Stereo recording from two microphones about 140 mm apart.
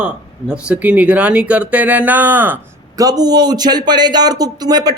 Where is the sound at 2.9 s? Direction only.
25° right (ahead or behind).